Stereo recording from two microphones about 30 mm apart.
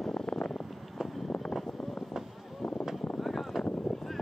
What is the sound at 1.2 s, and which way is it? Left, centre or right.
Vehicle, left.